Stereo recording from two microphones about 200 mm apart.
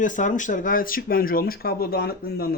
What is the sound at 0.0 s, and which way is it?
Speech, 40° left (ahead or behind).